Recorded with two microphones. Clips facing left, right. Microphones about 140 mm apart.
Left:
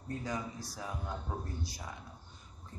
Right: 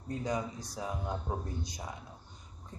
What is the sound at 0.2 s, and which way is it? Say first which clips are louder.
Speech: right 4 dB; 20° right (ahead or behind).